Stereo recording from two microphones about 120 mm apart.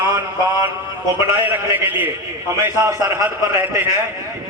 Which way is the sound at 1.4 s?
20° right (ahead or behind).